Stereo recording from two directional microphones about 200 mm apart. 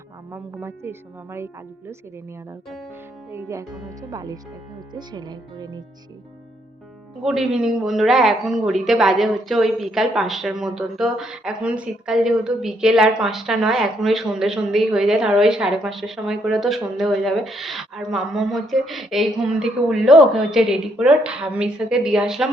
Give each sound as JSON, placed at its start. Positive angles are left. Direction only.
{"t": 0.3, "sound": "a woman's voice", "side_deg": -10}
{"t": 3.3, "sound": "a woman's voice", "side_deg": -15}
{"t": 7.2, "sound": "speech", "side_deg": 0}